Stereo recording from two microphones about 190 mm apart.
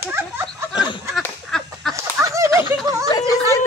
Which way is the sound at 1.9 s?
15° right (ahead or behind).